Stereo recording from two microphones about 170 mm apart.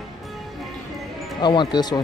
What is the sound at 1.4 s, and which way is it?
Speech, 25° left (ahead or behind).